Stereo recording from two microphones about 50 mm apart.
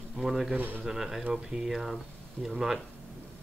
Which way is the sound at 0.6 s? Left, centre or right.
Right.